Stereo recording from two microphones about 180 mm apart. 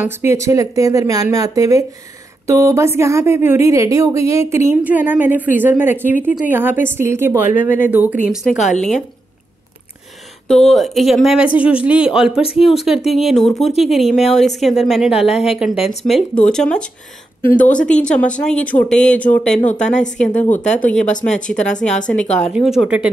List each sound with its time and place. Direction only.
0.0 s a woman's voice: 15° right (ahead or behind)
8.5 s speech: 40° left (ahead or behind)
10.5 s speech: centre (ahead or behind)
19.6 s speech: 40° left (ahead or behind)
20.8 s speech: 5° left (ahead or behind)